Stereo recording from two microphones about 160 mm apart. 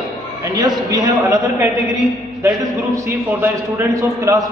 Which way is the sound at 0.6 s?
25° right (ahead or behind).